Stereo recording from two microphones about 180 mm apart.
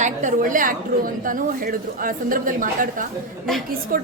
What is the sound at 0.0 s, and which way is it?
A woman's voice, 45° right (ahead or behind).